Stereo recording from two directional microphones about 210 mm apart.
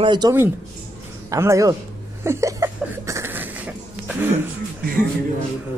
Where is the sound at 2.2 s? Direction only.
15° right (ahead or behind).